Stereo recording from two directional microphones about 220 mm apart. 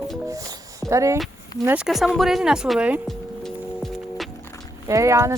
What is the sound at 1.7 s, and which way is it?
Music, 5° right (ahead or behind).